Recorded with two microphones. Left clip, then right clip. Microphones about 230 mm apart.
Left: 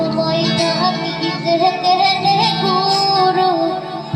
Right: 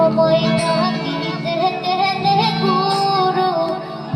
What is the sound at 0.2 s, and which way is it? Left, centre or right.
Music, right.